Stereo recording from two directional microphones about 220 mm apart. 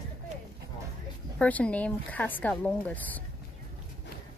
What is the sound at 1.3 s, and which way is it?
Speech, 5° left (ahead or behind).